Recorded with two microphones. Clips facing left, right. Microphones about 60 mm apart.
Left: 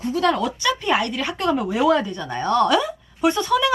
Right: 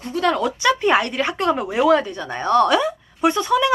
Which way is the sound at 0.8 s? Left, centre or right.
Right.